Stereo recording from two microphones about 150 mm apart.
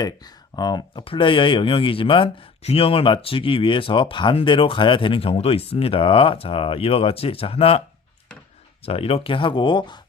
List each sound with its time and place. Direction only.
0.0 s speech: 25° left (ahead or behind)
8.8 s speech: 40° left (ahead or behind)